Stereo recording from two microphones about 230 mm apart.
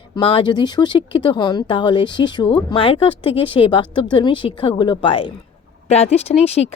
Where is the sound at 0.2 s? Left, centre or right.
Left.